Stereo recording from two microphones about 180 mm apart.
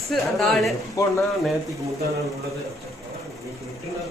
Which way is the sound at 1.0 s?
20° left (ahead or behind).